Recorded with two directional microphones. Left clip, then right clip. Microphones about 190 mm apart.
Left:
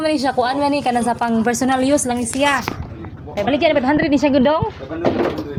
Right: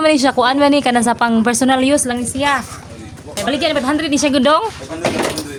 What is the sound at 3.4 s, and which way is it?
A woman's voice, 5° right (ahead or behind).